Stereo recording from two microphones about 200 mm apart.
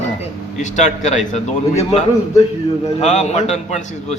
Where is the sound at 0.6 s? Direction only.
35° left (ahead or behind).